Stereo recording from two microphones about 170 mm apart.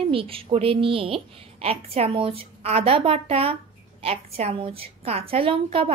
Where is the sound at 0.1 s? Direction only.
30° right (ahead or behind).